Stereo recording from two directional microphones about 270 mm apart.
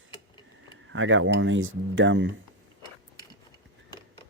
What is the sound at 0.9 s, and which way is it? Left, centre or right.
Speech, right.